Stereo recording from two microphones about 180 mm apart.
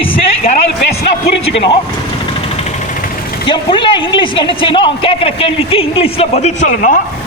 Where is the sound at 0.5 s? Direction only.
40° left (ahead or behind).